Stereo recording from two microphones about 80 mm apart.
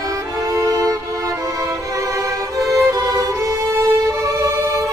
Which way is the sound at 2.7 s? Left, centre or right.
Right.